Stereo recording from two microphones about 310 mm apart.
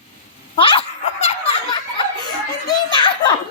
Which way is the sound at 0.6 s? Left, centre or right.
Centre.